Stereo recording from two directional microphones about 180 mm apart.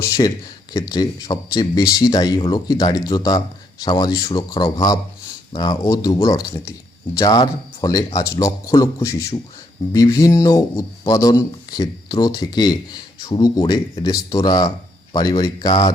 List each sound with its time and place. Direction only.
0.2 s speech: 20° left (ahead or behind)